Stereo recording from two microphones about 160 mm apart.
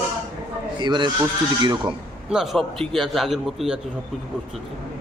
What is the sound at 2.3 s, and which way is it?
A man's voice, centre (ahead or behind).